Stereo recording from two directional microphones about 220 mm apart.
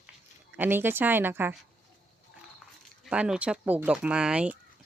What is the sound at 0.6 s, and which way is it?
Speech, 10° right (ahead or behind).